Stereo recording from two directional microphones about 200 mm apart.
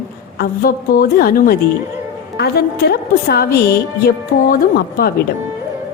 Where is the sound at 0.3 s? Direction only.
50° left (ahead or behind).